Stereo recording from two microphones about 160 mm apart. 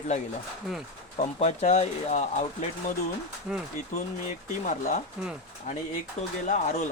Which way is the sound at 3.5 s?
5° right (ahead or behind).